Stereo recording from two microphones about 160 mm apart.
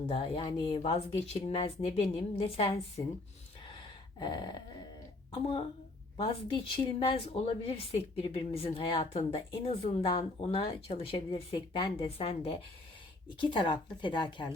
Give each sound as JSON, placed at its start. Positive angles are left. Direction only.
{"t": 0.1, "sound": "a woman's voice", "side_deg": 30}
{"t": 0.8, "sound": "a woman's voice", "side_deg": 40}
{"t": 4.2, "sound": "speech", "side_deg": 25}
{"t": 5.3, "sound": "a woman's voice", "side_deg": 35}
{"t": 6.7, "sound": "a woman's voice", "side_deg": 30}